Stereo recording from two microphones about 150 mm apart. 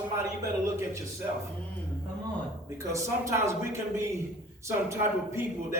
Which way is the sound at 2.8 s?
20° right (ahead or behind).